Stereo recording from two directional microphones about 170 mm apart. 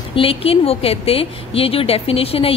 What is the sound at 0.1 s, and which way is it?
A woman's voice, 35° left (ahead or behind).